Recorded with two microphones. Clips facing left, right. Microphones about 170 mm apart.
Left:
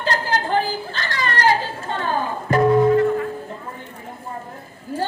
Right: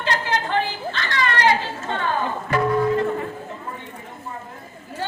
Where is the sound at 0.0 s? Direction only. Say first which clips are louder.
Left 1 dB; 40° left (ahead or behind).